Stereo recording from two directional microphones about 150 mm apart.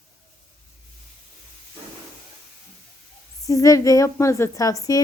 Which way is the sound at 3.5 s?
20° left (ahead or behind).